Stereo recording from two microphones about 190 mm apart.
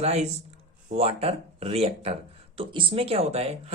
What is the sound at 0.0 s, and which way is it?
Speech, 35° right (ahead or behind).